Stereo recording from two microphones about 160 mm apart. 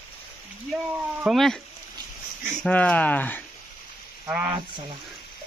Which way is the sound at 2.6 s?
10° left (ahead or behind).